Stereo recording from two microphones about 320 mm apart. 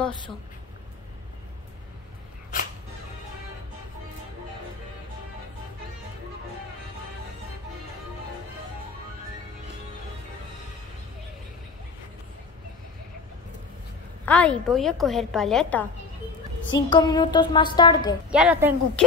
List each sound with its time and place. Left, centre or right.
14.2 s a woman's voice: centre
16.7 s a woman's voice: centre
18.3 s a woman's voice: centre